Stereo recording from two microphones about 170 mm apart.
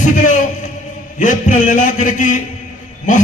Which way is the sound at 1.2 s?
45° left (ahead or behind).